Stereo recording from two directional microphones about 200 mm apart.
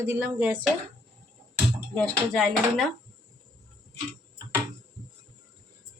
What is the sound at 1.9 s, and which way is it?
Speech, 5° left (ahead or behind).